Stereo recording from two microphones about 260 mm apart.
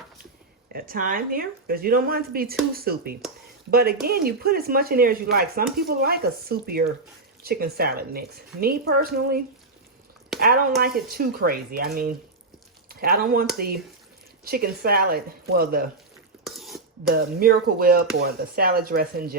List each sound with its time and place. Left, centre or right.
0.7 s speech: right
10.4 s speech: right
16.6 s a sound: centre
17.0 s speech: right